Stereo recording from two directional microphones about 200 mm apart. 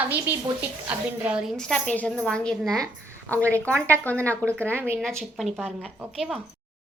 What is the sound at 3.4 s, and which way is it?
Speech, 15° right (ahead or behind).